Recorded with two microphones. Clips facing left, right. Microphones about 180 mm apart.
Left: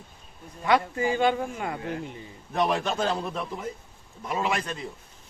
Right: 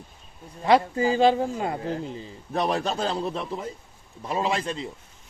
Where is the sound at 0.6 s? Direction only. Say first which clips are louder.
Right 4 dB; 30° right (ahead or behind).